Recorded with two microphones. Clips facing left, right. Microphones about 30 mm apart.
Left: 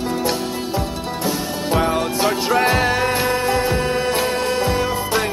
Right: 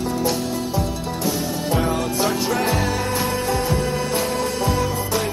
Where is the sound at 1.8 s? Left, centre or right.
Left.